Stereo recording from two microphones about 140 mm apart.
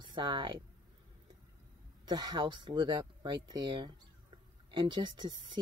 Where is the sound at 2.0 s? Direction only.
30° right (ahead or behind).